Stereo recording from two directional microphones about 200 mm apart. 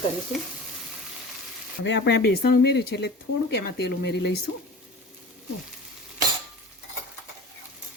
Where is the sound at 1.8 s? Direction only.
60° left (ahead or behind).